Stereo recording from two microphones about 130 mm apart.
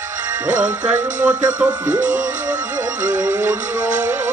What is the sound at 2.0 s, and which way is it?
Music, 75° right (ahead or behind).